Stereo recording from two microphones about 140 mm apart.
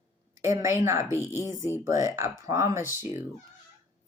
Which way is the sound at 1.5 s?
25° left (ahead or behind).